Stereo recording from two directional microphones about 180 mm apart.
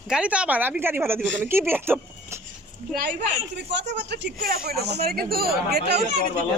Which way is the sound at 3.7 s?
75° right (ahead or behind).